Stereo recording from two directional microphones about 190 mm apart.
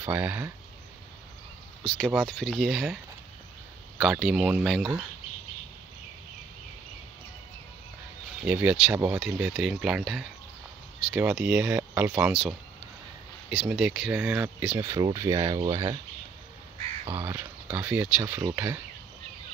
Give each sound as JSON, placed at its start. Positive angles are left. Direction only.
{"t": 0.0, "sound": "speech", "side_deg": -10}
{"t": 1.9, "sound": "speech", "side_deg": 5}
{"t": 4.0, "sound": "speech", "side_deg": 0}
{"t": 8.4, "sound": "speech", "side_deg": -10}
{"t": 13.6, "sound": "speech", "side_deg": -5}
{"t": 14.9, "sound": "speech", "side_deg": -20}
{"t": 17.1, "sound": "speech", "side_deg": -15}